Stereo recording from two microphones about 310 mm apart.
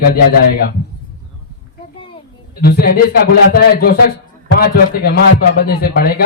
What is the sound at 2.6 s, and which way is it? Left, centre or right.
A man's voice, left.